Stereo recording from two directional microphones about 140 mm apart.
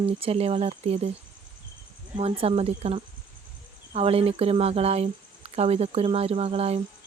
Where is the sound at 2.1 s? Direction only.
45° right (ahead or behind).